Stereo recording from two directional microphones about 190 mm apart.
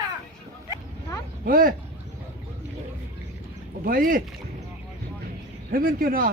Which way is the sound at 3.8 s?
50° right (ahead or behind).